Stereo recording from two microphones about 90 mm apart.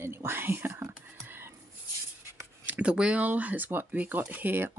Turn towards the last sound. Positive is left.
turn(degrees=-20)  # may be behind; listen again after turning